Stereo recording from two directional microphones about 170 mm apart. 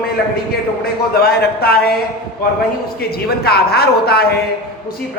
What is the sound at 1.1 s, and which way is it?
Speech, 65° left (ahead or behind).